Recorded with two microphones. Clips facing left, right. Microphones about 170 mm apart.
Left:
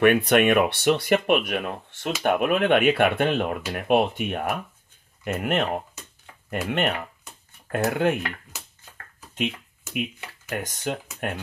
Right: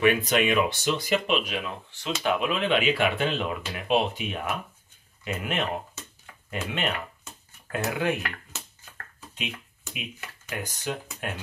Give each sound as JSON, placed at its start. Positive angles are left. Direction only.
{"t": 0.0, "sound": "speech", "side_deg": 60}
{"t": 10.5, "sound": "speech", "side_deg": 50}